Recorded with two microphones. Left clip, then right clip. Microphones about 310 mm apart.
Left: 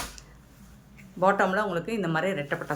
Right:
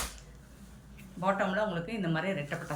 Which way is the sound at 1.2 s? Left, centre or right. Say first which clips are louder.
Left 7 dB; centre.